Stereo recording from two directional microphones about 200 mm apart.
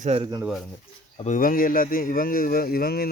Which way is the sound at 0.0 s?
30° right (ahead or behind).